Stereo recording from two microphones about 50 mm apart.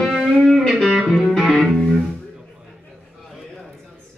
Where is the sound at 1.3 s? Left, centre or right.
Centre.